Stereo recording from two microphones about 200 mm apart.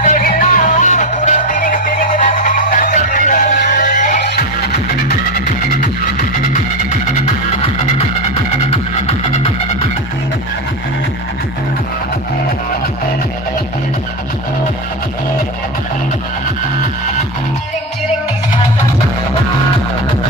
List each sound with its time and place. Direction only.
0.0 s music: 40° left (ahead or behind)
5.8 s music: 40° left (ahead or behind)